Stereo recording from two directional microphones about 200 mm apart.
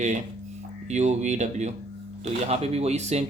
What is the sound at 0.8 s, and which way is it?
Speech, 35° right (ahead or behind).